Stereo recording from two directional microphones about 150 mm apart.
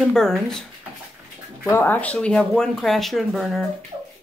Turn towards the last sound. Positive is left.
turn(degrees=0)  # may be behind; listen again after turning